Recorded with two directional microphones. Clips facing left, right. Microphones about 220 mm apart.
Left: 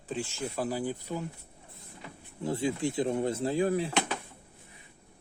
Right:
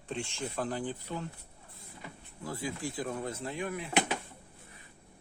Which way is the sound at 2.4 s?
25° left (ahead or behind).